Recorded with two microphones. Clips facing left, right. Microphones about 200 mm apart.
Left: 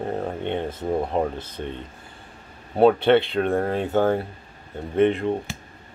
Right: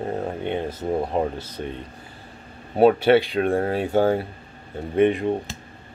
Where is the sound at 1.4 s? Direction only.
30° left (ahead or behind).